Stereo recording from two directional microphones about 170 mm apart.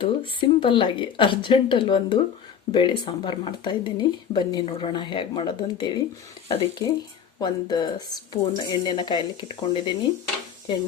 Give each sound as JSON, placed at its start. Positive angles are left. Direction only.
{"t": 0.0, "sound": "speech", "side_deg": 30}